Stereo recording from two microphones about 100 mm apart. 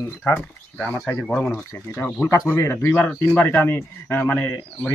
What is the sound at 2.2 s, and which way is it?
Speech, 30° left (ahead or behind).